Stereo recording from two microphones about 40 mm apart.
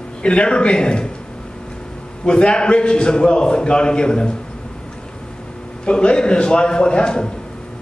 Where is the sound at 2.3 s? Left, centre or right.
Left.